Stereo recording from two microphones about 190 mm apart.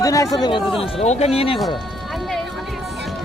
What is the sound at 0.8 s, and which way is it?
Speech, 35° left (ahead or behind).